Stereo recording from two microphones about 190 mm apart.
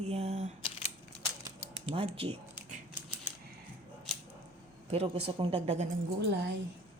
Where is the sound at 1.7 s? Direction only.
30° right (ahead or behind).